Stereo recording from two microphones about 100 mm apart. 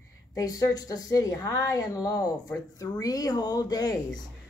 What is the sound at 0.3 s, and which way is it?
Speech, 35° left (ahead or behind).